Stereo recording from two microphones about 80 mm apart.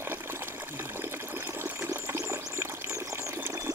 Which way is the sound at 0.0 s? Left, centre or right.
Right.